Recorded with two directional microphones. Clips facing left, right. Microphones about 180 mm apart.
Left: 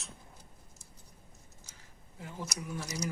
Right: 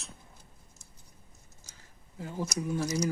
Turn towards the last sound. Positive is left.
turn(degrees=-25)  # may be behind; listen again after turning